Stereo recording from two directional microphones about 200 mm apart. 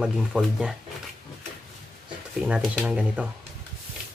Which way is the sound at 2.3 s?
5° right (ahead or behind).